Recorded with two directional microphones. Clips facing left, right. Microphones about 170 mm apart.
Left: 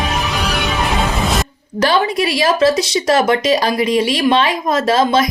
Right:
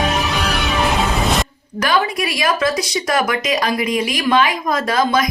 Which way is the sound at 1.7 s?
30° left (ahead or behind).